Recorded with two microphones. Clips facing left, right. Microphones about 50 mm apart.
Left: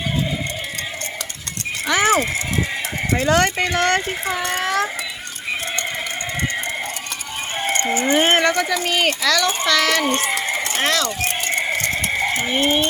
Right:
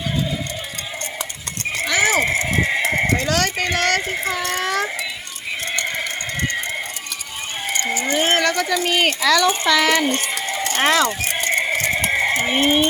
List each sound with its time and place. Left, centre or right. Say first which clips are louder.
1.9 s horse: left 2 dB; left
2.1 s speech: right 2 dB; right
3.2 s speech: left 3 dB; left
4.0 s speech: even; centre
5.8 s a sound: right 1 dB; centre
7.9 s speech: left 2 dB; left
8.5 s speech: even; centre
8.8 s speech: right 1 dB; centre
11.3 s a sound: right 4 dB; centre
11.9 s sheep: right 2 dB; centre
12.3 s speech: right 2 dB; right
12.6 s speech: right 2 dB; centre